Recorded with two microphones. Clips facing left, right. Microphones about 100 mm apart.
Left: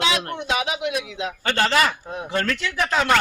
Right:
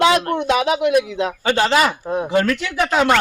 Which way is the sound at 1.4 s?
15° right (ahead or behind).